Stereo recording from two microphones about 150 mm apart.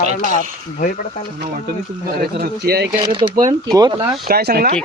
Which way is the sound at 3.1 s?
30° right (ahead or behind).